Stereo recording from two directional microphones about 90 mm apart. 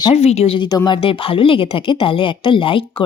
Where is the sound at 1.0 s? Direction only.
85° left.